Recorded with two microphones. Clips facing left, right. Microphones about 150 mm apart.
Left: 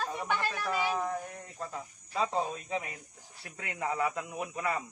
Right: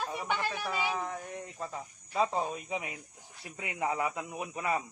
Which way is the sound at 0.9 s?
Centre (ahead or behind).